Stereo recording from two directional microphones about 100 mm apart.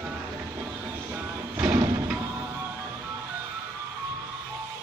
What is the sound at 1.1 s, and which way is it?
Music, 15° right (ahead or behind).